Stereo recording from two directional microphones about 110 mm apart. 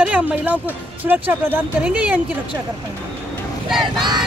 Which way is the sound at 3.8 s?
45° right (ahead or behind).